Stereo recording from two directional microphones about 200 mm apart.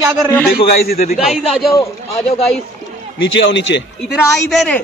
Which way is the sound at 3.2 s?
65° left (ahead or behind).